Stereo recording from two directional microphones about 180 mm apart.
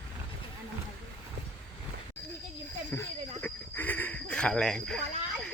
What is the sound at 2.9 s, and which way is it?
Speech, 15° left (ahead or behind).